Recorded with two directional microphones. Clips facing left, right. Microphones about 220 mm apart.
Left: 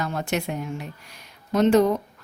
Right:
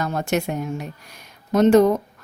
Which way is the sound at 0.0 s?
45° right (ahead or behind).